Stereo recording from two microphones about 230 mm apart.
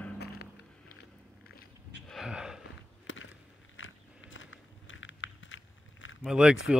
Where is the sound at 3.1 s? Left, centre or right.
Left.